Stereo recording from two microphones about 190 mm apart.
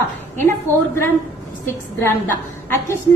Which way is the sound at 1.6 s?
15° left (ahead or behind).